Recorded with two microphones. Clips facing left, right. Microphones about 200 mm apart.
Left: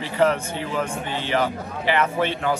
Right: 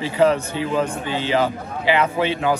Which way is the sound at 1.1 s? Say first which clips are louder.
Right 2 dB; 10° right (ahead or behind).